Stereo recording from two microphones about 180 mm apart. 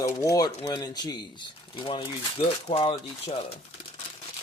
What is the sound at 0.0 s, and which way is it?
Speech, 20° left (ahead or behind).